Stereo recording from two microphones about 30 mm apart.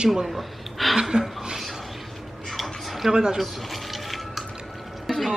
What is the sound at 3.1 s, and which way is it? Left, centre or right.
Speech, right.